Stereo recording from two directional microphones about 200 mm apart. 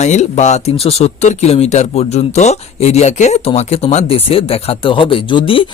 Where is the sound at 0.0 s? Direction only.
35° left (ahead or behind).